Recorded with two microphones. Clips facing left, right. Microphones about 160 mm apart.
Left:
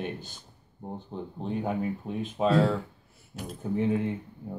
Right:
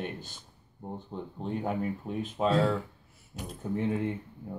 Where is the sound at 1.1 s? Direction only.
15° left (ahead or behind).